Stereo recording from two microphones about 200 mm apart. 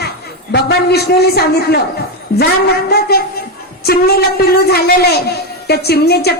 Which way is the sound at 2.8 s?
50° left (ahead or behind).